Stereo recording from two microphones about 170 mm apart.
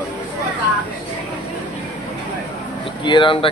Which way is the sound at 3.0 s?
30° left (ahead or behind).